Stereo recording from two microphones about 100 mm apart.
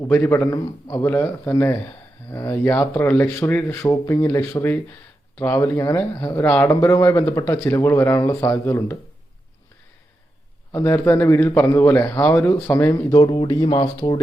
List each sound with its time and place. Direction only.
0.1 s speech: 20° left (ahead or behind)
6.4 s speech: 15° left (ahead or behind)
6.7 s speech: 25° left (ahead or behind)
10.7 s speech: 25° left (ahead or behind)
13.0 s speech: 35° left (ahead or behind)
13.5 s speech: 50° left (ahead or behind)